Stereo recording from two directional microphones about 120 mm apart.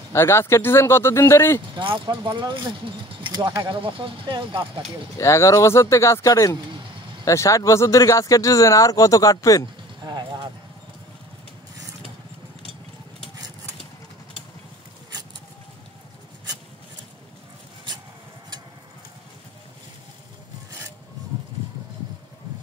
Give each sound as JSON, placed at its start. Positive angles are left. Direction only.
{"t": 0.1, "sound": "speech", "side_deg": 20}
{"t": 1.8, "sound": "speech", "side_deg": -45}
{"t": 5.1, "sound": "speech", "side_deg": 25}
{"t": 10.0, "sound": "clip-clop", "side_deg": -35}